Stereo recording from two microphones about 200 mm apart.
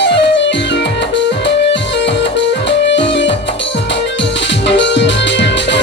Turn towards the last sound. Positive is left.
turn(degrees=60)  # may be behind; listen again after turning